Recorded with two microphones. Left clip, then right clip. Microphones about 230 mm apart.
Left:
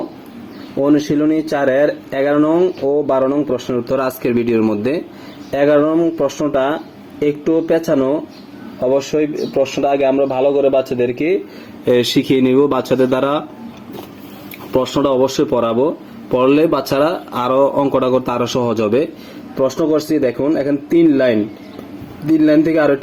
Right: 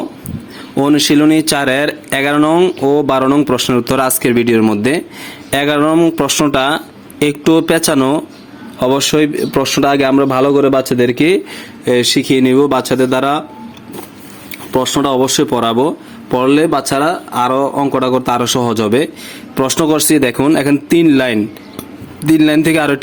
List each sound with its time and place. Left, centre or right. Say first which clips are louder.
0.9 s a man's voice: right 4 dB; right
5.5 s speech: even; right
11.9 s speech: right 2 dB; centre
14.7 s a man's voice: right 2 dB; centre
19.5 s speech: right 2 dB; right